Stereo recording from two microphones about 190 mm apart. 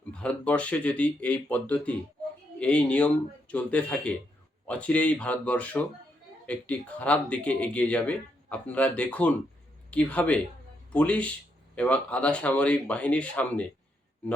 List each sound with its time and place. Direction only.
0.1 s speech: 5° left (ahead or behind)